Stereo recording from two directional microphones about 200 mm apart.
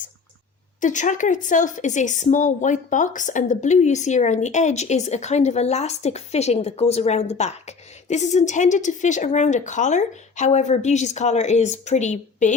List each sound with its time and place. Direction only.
0.8 s speech: 40° left (ahead or behind)